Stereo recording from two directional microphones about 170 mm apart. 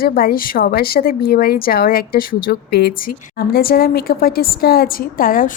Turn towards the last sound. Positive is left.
turn(degrees=55)  # may be behind; listen again after turning